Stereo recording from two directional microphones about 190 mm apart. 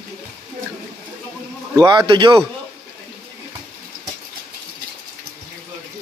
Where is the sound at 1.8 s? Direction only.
25° right (ahead or behind).